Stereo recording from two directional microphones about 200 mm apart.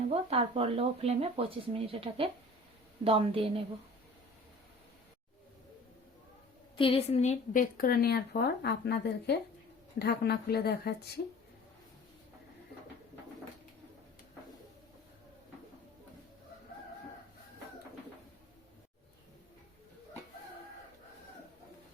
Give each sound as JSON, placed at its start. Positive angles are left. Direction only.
{"t": 0.0, "sound": "speech", "side_deg": -30}
{"t": 6.7, "sound": "a woman's voice", "side_deg": 30}